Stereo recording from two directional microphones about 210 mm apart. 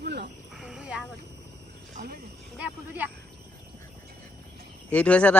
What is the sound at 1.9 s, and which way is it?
Speech, 45° right (ahead or behind).